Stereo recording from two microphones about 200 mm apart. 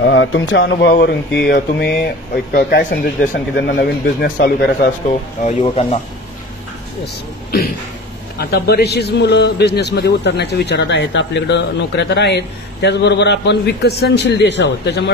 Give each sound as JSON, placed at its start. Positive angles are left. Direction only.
{"t": 0.0, "sound": "a man's voice", "side_deg": 65}
{"t": 5.6, "sound": "speech", "side_deg": 25}
{"t": 8.4, "sound": "a man's voice", "side_deg": 50}